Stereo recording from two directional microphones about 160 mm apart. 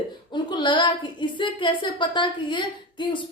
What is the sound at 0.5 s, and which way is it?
Speech, 30° left (ahead or behind).